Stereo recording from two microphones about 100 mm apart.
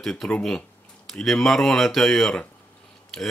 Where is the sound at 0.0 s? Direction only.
5° left (ahead or behind).